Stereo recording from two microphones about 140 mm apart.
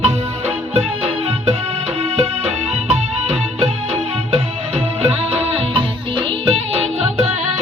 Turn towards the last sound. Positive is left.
turn(degrees=-45)  # may be behind; listen again after turning